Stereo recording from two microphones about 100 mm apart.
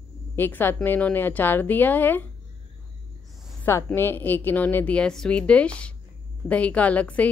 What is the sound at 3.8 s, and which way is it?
A woman's voice, 20° left (ahead or behind).